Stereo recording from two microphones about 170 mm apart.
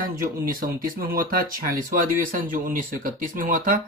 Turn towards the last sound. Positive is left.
turn(degrees=-50)  # may be behind; listen again after turning